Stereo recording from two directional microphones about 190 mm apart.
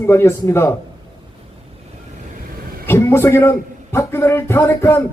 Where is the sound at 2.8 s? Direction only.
15° left (ahead or behind).